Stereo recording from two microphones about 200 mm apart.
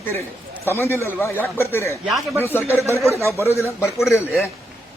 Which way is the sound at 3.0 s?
15° right (ahead or behind).